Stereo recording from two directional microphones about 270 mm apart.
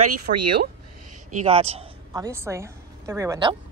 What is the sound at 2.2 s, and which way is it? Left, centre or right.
A woman's voice, centre.